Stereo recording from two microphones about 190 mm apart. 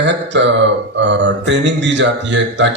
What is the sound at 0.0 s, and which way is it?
Speech, 70° right (ahead or behind).